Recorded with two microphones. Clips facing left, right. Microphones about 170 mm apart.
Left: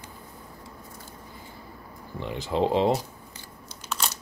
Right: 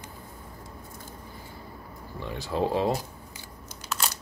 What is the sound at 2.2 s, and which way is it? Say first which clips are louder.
Speech: left 3 dB; 20° left (ahead or behind).